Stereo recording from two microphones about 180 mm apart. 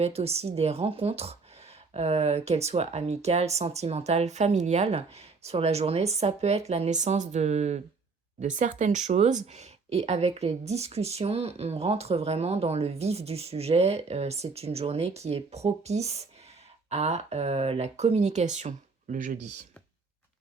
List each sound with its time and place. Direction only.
0.0 s speech: 35° right (ahead or behind)